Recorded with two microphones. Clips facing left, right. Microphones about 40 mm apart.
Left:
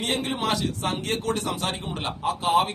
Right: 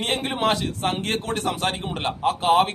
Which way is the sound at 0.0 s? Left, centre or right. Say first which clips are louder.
Right 3 dB; right.